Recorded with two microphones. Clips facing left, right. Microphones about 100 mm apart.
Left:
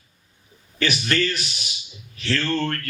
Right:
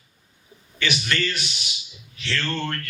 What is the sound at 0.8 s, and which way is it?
Speech, 40° left (ahead or behind).